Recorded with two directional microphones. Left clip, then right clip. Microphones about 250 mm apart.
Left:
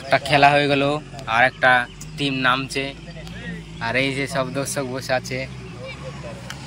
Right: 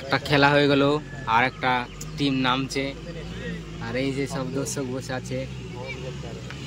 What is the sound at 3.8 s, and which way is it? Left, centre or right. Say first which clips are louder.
Speech: left 6 dB; centre.